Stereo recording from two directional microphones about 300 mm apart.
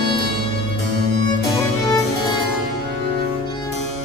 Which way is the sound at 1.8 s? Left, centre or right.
Centre.